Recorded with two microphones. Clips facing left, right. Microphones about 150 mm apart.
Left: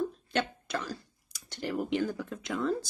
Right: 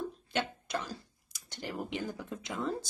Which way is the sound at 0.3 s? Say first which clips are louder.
Left 3 dB; 20° right (ahead or behind).